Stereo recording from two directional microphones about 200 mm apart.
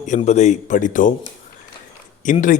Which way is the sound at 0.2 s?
35° left (ahead or behind).